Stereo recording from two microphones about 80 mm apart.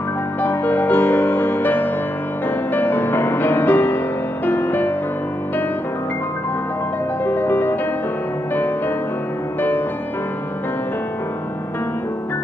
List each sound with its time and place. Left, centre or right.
0.4 s music: left
7.2 s music: left